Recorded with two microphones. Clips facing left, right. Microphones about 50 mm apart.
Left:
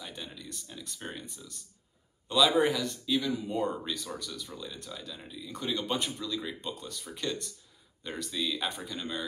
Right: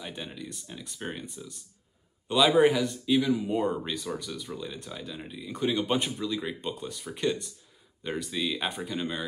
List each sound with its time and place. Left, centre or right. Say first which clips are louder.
0.0 s speech: right 4 dB; right